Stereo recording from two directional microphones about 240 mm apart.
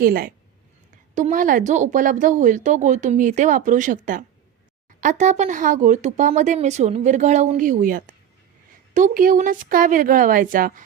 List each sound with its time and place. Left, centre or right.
0.0 s speech: right